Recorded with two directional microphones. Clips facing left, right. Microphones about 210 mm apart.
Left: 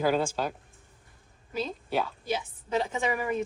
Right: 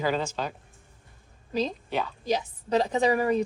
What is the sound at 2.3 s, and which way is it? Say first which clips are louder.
A woman's voice: right 4 dB; 40° right (ahead or behind).